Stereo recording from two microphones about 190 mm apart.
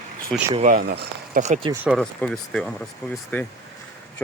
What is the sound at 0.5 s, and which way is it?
Speech, 45° right (ahead or behind).